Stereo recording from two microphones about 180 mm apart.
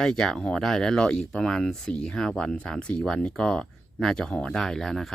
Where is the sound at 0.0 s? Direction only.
5° left (ahead or behind).